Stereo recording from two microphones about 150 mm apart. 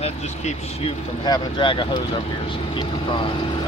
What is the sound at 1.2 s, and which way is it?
Speech, 30° left (ahead or behind).